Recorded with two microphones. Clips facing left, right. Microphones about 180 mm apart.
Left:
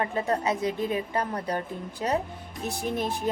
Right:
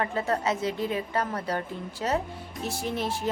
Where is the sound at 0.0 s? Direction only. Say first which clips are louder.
Left 1 dB; 20° left (ahead or behind).